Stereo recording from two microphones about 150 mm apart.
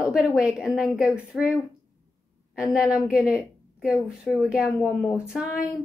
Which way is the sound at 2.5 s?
5° right (ahead or behind).